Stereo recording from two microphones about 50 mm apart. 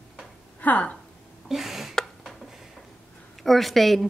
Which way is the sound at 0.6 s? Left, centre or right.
Left.